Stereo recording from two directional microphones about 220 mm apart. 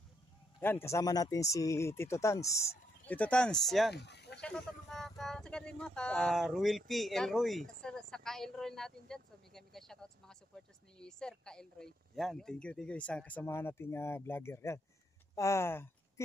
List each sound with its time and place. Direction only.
0.6 s speech: 10° left (ahead or behind)
3.9 s a sound: 50° left (ahead or behind)
4.4 s speech: 5° left (ahead or behind)